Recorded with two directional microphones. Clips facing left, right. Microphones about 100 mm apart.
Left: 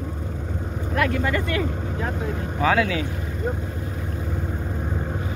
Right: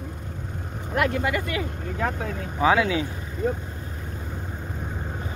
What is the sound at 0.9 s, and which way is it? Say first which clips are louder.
Speech: left 1 dB; 20° right (ahead or behind).